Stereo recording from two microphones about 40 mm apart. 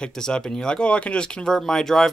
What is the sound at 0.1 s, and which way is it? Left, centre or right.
Speech, centre.